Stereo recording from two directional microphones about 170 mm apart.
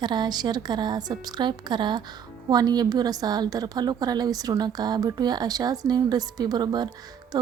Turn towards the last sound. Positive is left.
turn(degrees=-25)  # may be behind; listen again after turning